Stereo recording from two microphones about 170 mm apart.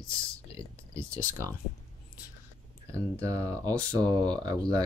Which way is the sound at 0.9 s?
15° right (ahead or behind).